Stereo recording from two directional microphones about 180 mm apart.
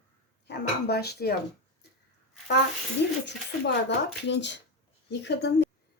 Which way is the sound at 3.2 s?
75° left (ahead or behind).